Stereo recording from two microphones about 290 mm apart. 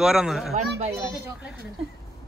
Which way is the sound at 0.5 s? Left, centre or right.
Right.